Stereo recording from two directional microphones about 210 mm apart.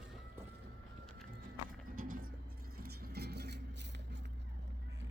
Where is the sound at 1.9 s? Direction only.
40° right (ahead or behind).